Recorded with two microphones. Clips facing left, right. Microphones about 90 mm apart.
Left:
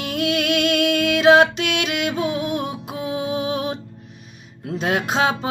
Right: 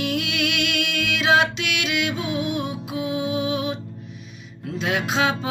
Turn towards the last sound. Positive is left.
turn(degrees=40)  # may be behind; listen again after turning